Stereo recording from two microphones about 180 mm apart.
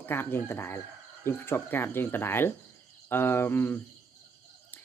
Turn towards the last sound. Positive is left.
turn(degrees=10)  # may be behind; listen again after turning